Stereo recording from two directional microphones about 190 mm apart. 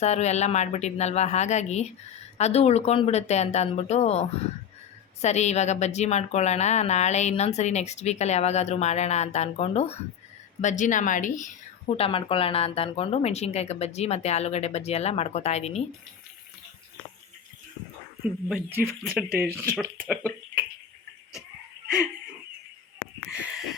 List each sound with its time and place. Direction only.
0.0 s a woman's voice: 35° left (ahead or behind)
11.9 s a woman's voice: 30° left (ahead or behind)
18.2 s speech: 10° right (ahead or behind)
23.3 s a sound: 5° right (ahead or behind)